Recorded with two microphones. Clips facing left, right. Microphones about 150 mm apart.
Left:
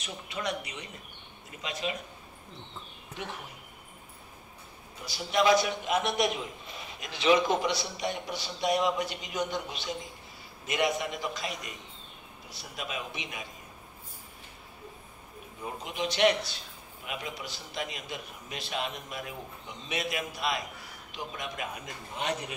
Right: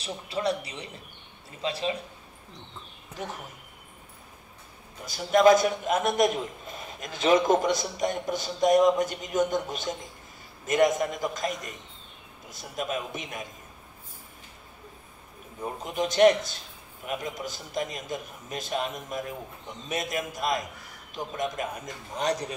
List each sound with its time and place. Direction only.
0.0 s a man's voice: 30° right (ahead or behind)
5.0 s a man's voice: 50° right (ahead or behind)
15.6 s a man's voice: 45° right (ahead or behind)